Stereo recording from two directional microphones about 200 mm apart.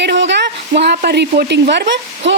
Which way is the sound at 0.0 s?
60° right (ahead or behind).